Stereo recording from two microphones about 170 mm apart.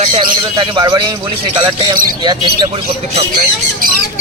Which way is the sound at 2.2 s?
25° right (ahead or behind).